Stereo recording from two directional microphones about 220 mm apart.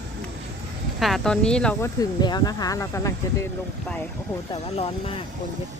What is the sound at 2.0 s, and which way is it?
Speech, 20° left (ahead or behind).